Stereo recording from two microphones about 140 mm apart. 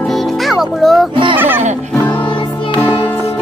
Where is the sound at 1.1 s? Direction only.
35° right (ahead or behind).